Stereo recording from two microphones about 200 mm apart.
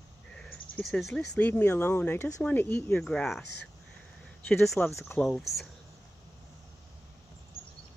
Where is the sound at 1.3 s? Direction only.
5° left (ahead or behind).